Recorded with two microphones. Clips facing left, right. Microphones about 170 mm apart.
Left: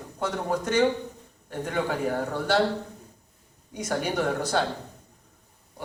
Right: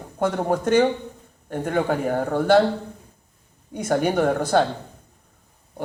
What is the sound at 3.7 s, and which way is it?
Speech, 50° right (ahead or behind).